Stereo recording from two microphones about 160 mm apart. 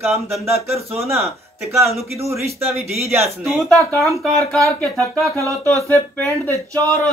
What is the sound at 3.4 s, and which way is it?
Speech, centre (ahead or behind).